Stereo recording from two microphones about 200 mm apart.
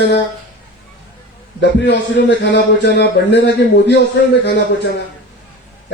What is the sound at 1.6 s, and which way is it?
Speech, 60° left (ahead or behind).